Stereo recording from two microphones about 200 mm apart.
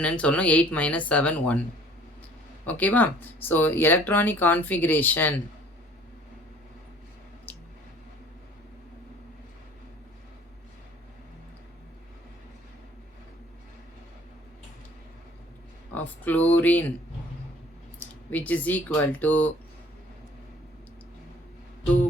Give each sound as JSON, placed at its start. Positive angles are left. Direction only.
{"t": 0.0, "sound": "speech", "side_deg": 5}
{"t": 2.6, "sound": "speech", "side_deg": 10}
{"t": 7.5, "sound": "squish", "side_deg": 10}
{"t": 16.0, "sound": "speech", "side_deg": 10}
{"t": 18.0, "sound": "speech", "side_deg": 10}